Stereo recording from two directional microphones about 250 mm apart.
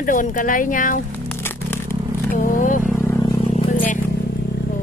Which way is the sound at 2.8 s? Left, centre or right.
Centre.